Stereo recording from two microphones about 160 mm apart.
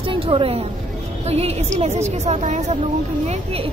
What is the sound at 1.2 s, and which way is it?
A woman's voice, 40° right (ahead or behind).